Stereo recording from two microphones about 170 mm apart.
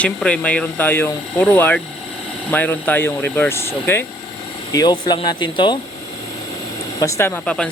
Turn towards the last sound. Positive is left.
turn(degrees=5)  # may be behind; listen again after turning